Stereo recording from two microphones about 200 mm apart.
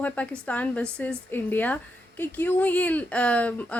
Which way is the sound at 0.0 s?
5° left (ahead or behind).